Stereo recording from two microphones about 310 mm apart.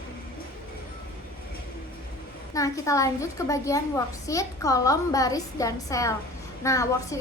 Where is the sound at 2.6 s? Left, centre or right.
Centre.